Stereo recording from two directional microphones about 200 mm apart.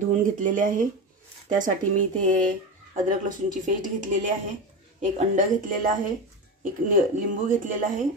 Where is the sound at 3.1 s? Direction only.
40° right (ahead or behind).